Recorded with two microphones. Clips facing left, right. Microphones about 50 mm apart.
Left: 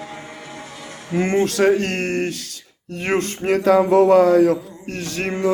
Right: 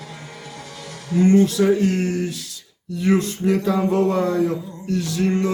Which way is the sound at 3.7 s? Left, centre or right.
Left.